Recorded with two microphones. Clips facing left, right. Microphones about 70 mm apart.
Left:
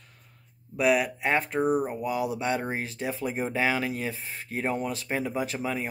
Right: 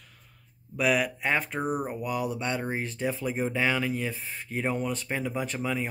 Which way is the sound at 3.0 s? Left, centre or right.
Centre.